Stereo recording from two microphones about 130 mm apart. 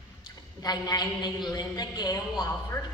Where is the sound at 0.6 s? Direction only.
30° left (ahead or behind).